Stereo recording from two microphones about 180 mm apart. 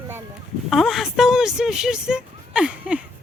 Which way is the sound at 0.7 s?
Centre (ahead or behind).